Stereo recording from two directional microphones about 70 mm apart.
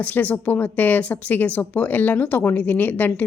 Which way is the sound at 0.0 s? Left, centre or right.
Left.